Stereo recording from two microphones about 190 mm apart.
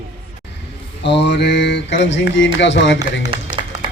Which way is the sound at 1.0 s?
65° left (ahead or behind).